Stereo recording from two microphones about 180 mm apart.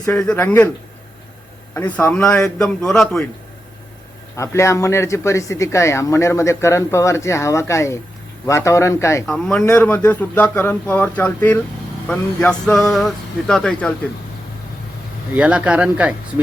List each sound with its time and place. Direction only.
0.2 s speech: 5° left (ahead or behind)
1.7 s speech: 10° left (ahead or behind)
4.4 s speech: 15° left (ahead or behind)
9.2 s speech: 5° left (ahead or behind)
15.4 s speech: 5° right (ahead or behind)